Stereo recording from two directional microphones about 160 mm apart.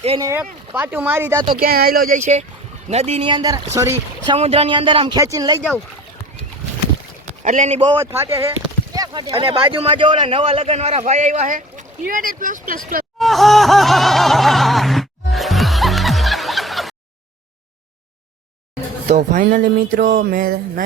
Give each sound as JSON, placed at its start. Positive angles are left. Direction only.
{"t": 0.2, "sound": "speech", "side_deg": -15}
{"t": 1.5, "sound": "speech", "side_deg": -65}
{"t": 2.1, "sound": "a man's voice", "side_deg": -45}
{"t": 4.4, "sound": "speech", "side_deg": -40}
{"t": 7.4, "sound": "a man's voice", "side_deg": -45}
{"t": 7.9, "sound": "speech", "side_deg": -20}
{"t": 9.0, "sound": "a man's voice", "side_deg": -30}
{"t": 13.1, "sound": "laughter", "side_deg": 0}
{"t": 19.0, "sound": "speech", "side_deg": -50}